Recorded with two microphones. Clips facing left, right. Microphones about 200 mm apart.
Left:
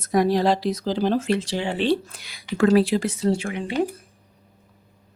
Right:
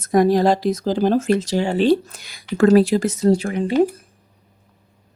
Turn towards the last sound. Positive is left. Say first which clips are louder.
# right 6 dB
turn(degrees=-40)  # may be behind; listen again after turning